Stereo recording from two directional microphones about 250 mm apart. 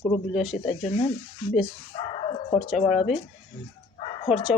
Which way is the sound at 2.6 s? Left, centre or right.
Centre.